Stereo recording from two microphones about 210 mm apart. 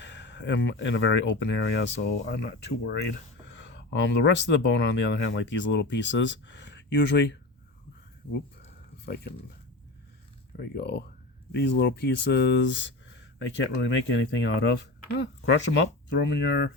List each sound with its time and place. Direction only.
0.0 s speech: 60° left (ahead or behind)
10.6 s speech: 50° left (ahead or behind)